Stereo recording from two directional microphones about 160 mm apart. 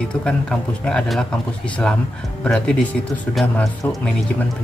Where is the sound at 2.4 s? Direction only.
5° left (ahead or behind).